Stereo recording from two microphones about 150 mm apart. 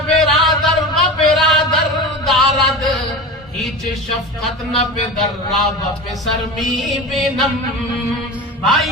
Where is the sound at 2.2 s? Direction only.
Centre (ahead or behind).